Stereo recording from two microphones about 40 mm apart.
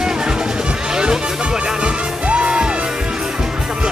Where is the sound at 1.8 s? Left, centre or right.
Right.